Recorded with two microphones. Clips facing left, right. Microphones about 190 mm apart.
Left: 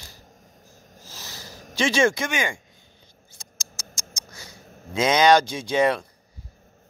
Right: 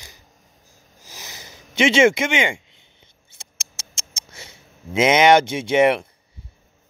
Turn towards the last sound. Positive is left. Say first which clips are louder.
# right 5 dB
turn(degrees=-25)  # may be behind; listen again after turning